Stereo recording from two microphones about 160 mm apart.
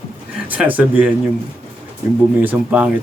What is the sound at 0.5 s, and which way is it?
Speech, 10° right (ahead or behind).